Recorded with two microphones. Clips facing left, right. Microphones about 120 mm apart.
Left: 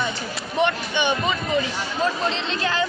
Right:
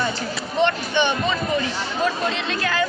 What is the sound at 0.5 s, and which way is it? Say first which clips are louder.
Speech: right 2 dB; 15° left (ahead or behind).